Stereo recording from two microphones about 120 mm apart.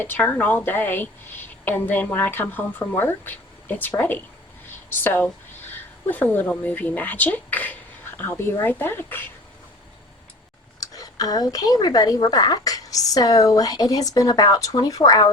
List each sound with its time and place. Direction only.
0.0 s speech: 15° left (ahead or behind)
10.8 s speech: 30° left (ahead or behind)